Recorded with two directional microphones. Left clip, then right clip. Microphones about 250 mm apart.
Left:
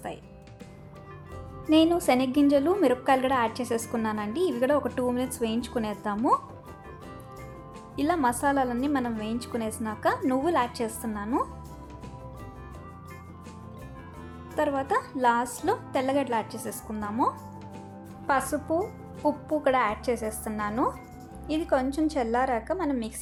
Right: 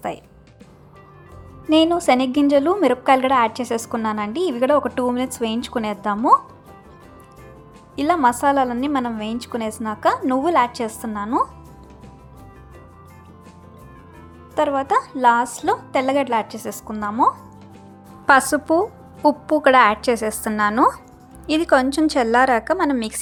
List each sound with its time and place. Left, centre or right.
1.7 s a woman's voice: centre
7.9 s a woman's voice: centre
14.5 s a woman's voice: centre